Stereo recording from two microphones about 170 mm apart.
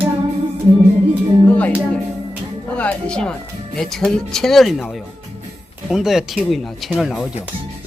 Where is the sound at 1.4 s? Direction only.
10° left (ahead or behind).